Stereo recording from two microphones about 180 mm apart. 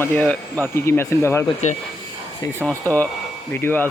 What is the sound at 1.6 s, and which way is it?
Speech, 40° left (ahead or behind).